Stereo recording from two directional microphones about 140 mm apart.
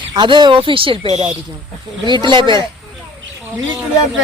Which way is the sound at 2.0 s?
35° right (ahead or behind).